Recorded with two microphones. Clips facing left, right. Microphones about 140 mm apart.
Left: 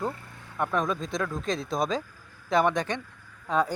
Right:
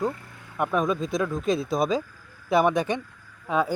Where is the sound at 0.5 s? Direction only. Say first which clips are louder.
Right 3 dB; 10° right (ahead or behind).